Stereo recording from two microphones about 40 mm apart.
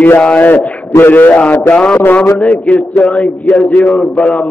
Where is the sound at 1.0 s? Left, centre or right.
Left.